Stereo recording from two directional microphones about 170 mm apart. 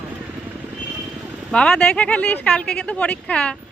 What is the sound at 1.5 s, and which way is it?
Speech, 5° left (ahead or behind).